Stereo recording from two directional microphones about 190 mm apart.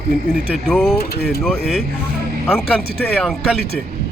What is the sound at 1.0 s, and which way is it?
Speech, 55° left (ahead or behind).